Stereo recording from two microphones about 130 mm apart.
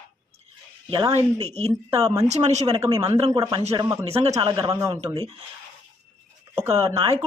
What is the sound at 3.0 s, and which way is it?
Speech, 30° right (ahead or behind).